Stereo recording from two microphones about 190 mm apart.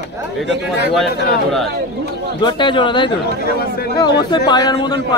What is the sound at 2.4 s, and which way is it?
Speech, 25° left (ahead or behind).